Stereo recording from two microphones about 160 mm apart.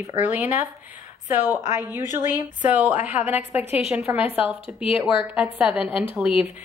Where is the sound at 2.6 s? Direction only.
10° right (ahead or behind).